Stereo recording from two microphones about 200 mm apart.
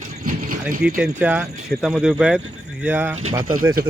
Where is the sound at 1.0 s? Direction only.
10° right (ahead or behind).